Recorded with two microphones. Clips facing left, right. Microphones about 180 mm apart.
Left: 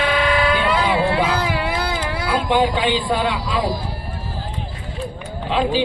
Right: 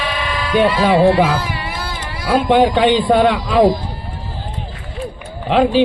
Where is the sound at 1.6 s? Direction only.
65° left (ahead or behind).